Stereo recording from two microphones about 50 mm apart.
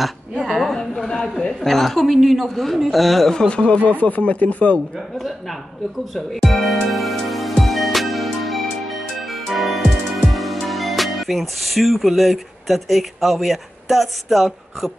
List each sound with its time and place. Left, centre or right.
0.0 s a sound: centre
0.7 s a sound: centre
1.6 s a woman's voice: centre
3.3 s speech: left
6.1 s a woman's voice: centre
6.9 s music: centre
10.2 s speech: centre